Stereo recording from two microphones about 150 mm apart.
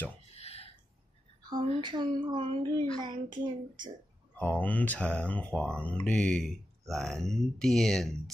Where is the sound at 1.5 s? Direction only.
30° right (ahead or behind).